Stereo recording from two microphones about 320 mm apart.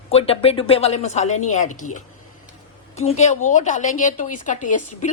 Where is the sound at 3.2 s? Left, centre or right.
Left.